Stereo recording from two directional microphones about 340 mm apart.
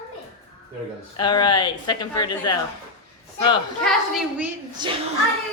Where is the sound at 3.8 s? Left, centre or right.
Centre.